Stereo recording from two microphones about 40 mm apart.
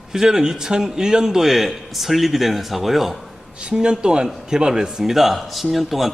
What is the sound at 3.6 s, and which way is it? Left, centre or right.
Speech, right.